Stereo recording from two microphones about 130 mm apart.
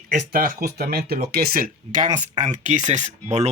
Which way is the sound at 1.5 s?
90° right.